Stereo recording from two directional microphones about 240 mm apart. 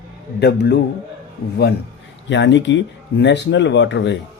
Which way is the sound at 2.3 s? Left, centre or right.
Left.